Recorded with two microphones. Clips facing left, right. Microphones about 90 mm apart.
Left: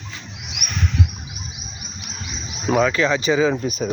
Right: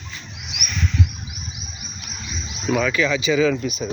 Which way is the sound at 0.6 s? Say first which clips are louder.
Even; 60° left (ahead or behind).